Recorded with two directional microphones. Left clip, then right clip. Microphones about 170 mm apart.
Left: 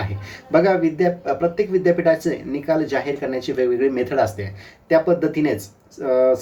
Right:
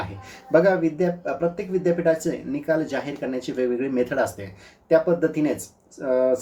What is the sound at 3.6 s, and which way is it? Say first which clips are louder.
Speech: left 4 dB; 20° right (ahead or behind).